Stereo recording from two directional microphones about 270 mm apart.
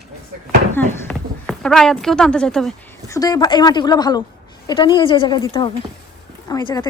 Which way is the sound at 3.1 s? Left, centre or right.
Centre.